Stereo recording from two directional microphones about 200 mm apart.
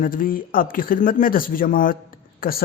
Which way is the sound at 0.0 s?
45° left (ahead or behind).